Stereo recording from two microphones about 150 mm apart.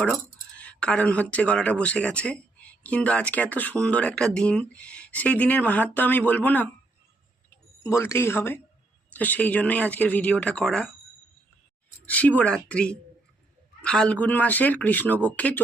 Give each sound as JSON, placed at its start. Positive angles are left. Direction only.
{"t": 0.0, "sound": "speech", "side_deg": 5}
{"t": 12.0, "sound": "speech", "side_deg": 10}